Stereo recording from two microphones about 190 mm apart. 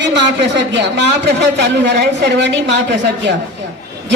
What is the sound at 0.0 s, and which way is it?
A man's voice, 70° right (ahead or behind).